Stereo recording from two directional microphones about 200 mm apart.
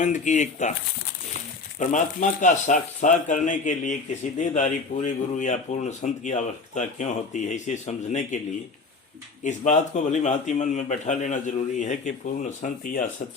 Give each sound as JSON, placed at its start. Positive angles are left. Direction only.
{"t": 0.0, "sound": "speech", "side_deg": 35}
{"t": 1.8, "sound": "speech", "side_deg": 40}
{"t": 9.4, "sound": "speech", "side_deg": 35}